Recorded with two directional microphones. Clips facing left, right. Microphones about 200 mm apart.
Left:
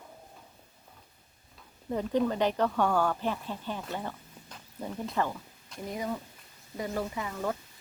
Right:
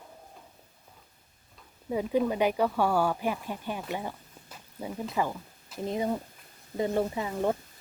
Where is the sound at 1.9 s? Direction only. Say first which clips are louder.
Right 1 dB; 10° right (ahead or behind).